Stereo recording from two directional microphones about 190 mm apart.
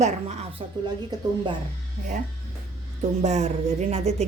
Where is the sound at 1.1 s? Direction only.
20° right (ahead or behind).